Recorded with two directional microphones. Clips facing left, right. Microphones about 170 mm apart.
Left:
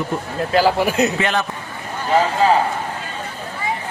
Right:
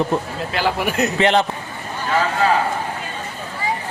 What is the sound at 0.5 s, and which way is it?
Speech, 30° left (ahead or behind).